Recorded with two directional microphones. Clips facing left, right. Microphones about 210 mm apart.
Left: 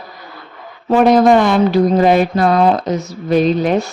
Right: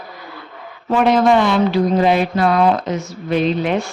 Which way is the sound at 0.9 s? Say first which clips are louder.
Left 4 dB; 40° left (ahead or behind).